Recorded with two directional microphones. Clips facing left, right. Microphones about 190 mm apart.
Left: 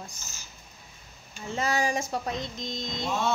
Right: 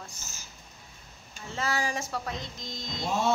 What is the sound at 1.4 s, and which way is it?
Speech, 15° left (ahead or behind).